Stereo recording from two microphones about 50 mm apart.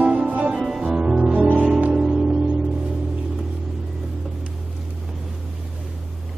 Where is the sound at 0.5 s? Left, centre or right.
Centre.